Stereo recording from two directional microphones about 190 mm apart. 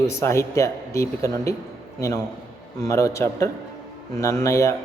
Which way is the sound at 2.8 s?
15° left (ahead or behind).